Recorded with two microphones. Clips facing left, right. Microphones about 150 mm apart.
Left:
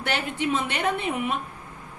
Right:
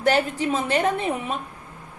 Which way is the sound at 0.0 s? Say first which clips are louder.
Right 6 dB; 40° right (ahead or behind).